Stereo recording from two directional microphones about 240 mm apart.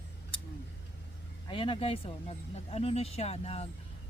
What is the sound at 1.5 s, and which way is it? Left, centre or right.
Speech, left.